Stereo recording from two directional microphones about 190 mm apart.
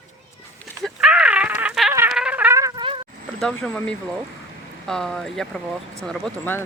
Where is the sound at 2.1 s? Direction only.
5° right (ahead or behind); by 3.0 s 25° right (ahead or behind).